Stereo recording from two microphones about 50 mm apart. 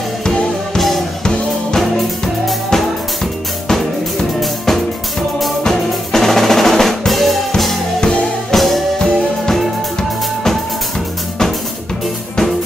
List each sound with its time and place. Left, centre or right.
0.7 s music: centre
1.2 s music: centre
1.8 s music: centre
5.6 s drum: centre
8.0 s music: centre
8.5 s music: centre